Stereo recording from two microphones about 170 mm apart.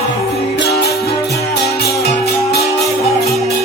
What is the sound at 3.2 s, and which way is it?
Music, centre (ahead or behind).